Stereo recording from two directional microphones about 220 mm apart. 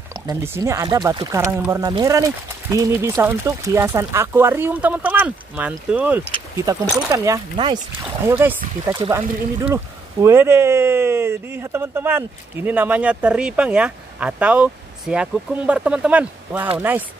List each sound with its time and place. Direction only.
0.1 s speech: 10° right (ahead or behind)
8.3 s speech: 10° right (ahead or behind)
10.2 s speech: 10° right (ahead or behind)